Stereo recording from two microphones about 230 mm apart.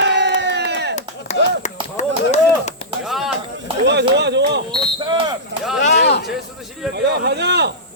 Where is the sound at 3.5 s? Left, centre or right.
Right.